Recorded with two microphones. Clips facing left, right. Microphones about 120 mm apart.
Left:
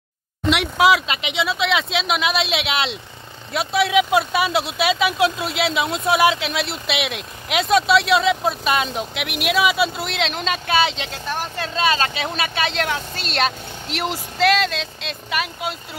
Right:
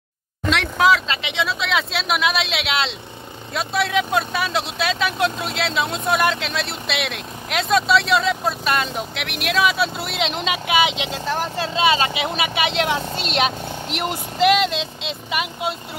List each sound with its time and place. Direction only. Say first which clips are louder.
0.5 s speech: left 1 dB; 10° left (ahead or behind); by 11.1 s 15° right (ahead or behind)
11.1 s speech: right 3 dB; 25° right (ahead or behind)